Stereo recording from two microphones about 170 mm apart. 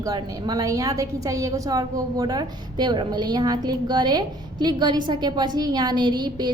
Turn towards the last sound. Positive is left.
turn(degrees=-25)  # may be behind; listen again after turning